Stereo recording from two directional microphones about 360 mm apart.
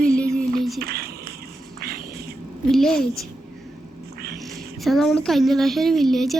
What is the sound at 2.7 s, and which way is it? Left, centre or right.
Speech, centre.